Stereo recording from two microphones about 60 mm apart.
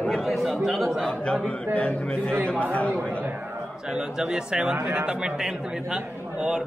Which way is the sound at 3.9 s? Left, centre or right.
Centre.